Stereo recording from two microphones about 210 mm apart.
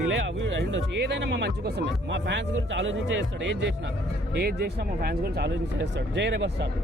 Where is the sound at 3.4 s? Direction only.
55° right (ahead or behind).